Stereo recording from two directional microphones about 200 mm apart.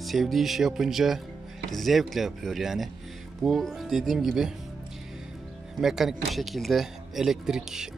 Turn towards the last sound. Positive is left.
turn(degrees=0)  # may be behind; listen again after turning